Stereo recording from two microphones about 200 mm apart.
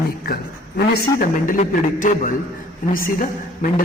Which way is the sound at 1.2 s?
40° left (ahead or behind).